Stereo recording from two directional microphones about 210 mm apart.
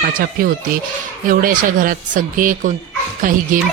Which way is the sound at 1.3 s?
40° right (ahead or behind).